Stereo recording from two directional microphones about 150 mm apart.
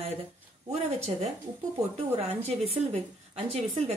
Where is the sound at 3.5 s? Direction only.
45° right (ahead or behind).